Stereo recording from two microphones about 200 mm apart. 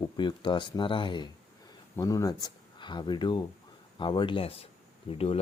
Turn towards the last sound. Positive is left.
turn(degrees=30)  # may be behind; listen again after turning